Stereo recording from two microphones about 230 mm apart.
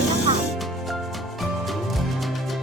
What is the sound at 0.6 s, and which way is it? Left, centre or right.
Music, centre.